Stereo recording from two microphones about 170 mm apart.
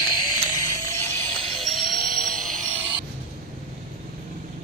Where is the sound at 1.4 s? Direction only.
Centre (ahead or behind).